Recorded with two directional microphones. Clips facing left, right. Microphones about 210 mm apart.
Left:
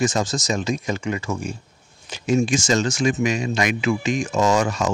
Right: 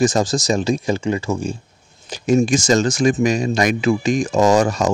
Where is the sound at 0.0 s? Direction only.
35° right (ahead or behind).